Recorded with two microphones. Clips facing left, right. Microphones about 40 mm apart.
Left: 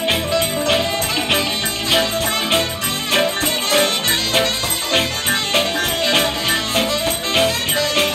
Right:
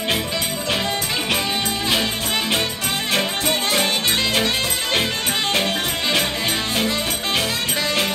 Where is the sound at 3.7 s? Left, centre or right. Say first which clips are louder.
Left 3 dB; left.